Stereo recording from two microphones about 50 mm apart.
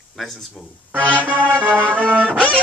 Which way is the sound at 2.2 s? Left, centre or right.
Left.